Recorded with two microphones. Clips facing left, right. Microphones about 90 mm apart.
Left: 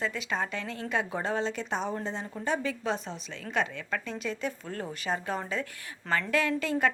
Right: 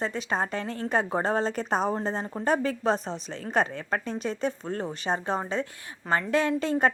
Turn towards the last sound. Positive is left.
turn(degrees=-35)  # may be behind; listen again after turning